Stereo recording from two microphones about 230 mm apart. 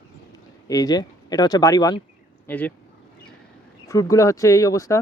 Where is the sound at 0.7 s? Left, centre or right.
Centre.